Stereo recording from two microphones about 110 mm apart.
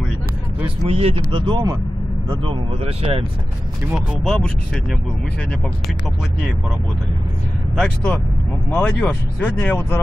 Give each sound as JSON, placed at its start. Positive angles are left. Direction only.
{"t": 0.8, "sound": "speech", "side_deg": -70}
{"t": 1.5, "sound": "speech", "side_deg": -35}
{"t": 2.4, "sound": "speech", "side_deg": -55}
{"t": 3.9, "sound": "speech", "side_deg": 5}
{"t": 7.7, "sound": "speech", "side_deg": 5}